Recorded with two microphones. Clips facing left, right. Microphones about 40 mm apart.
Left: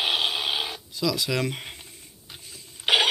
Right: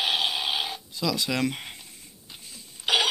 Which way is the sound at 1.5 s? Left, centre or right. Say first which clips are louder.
Left 1 dB; centre.